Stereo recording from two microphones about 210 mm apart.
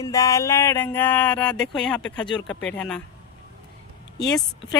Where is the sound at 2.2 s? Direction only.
20° left (ahead or behind).